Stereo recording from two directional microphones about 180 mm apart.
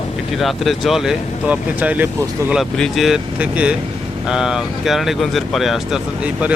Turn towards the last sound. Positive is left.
turn(degrees=0)  # may be behind; listen again after turning